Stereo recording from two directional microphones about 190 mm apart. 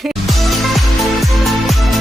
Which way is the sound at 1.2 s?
Centre (ahead or behind).